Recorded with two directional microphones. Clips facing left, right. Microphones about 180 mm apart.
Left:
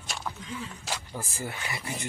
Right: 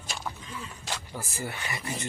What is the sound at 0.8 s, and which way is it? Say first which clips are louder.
Speech: left 1 dB; 5° left (ahead or behind).